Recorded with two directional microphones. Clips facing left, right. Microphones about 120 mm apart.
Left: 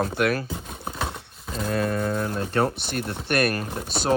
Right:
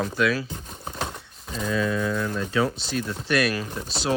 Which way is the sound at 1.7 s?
55° left (ahead or behind).